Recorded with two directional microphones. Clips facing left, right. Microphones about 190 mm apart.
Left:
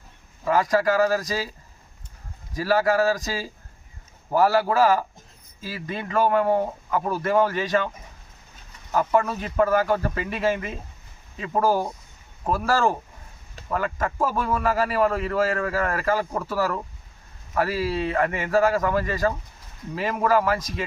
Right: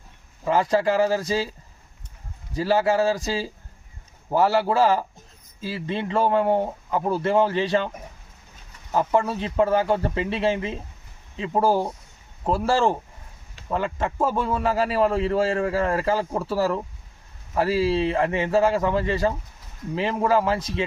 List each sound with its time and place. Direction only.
0.4 s speech: 25° right (ahead or behind)
2.6 s speech: 25° right (ahead or behind)
8.9 s speech: 25° right (ahead or behind)